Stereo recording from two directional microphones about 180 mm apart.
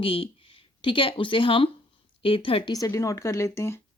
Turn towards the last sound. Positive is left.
turn(degrees=15)  # may be behind; listen again after turning